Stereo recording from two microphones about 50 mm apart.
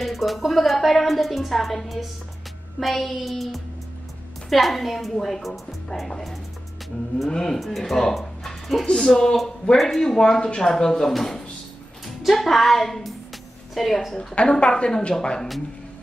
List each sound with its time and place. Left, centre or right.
0.0 s a woman's voice: centre
14.3 s a woman's voice: left